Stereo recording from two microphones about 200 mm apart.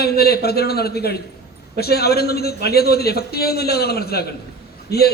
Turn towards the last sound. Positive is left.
turn(degrees=55)  # may be behind; listen again after turning